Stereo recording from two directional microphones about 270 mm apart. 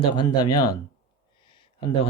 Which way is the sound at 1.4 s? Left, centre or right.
Centre.